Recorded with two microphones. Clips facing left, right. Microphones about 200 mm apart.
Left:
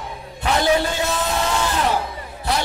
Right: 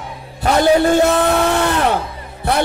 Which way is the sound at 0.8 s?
55° right (ahead or behind).